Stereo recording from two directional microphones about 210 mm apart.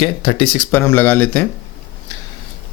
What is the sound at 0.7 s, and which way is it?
Speech, 10° left (ahead or behind).